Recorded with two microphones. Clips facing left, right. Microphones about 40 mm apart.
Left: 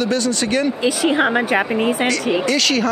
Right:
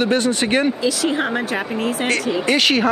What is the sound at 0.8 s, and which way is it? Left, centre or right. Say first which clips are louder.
Speech: left 3 dB; left.